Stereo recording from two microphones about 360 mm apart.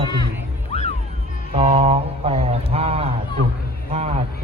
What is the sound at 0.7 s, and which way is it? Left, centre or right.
Music, centre.